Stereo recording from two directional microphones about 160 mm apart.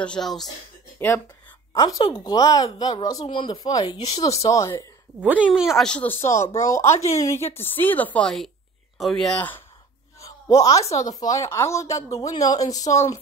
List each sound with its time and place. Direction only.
0.0 s speech: 5° left (ahead or behind)
0.9 s speech: 15° left (ahead or behind)
5.2 s a woman's voice: 10° right (ahead or behind); by 9.6 s 10° left (ahead or behind)
10.2 s a sound: 20° left (ahead or behind)
11.0 s speech: 20° left (ahead or behind)